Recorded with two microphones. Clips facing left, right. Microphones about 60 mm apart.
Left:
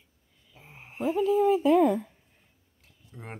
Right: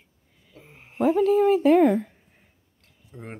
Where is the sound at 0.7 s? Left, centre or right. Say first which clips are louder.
Left 1 dB; centre.